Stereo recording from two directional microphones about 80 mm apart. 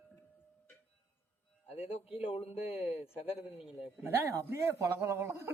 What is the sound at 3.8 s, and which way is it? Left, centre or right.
Speech, right.